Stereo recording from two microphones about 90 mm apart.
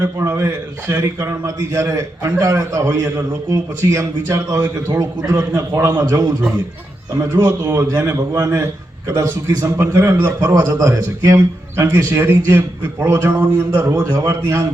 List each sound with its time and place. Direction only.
0.0 s a man's voice: 30° right (ahead or behind)
5.4 s a man's voice: 30° right (ahead or behind)
6.0 s a man's voice: 45° right (ahead or behind)
10.5 s a man's voice: 45° right (ahead or behind); by 13.5 s 25° right (ahead or behind)
13.7 s a man's voice: 40° right (ahead or behind)